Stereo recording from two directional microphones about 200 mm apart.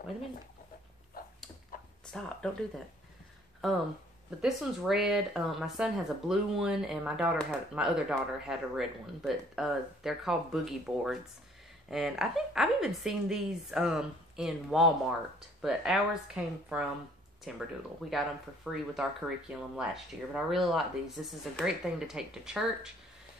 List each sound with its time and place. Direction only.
1.2 s dog: 50° left (ahead or behind)
2.0 s speech: 5° left (ahead or behind)
4.4 s speech: centre (ahead or behind)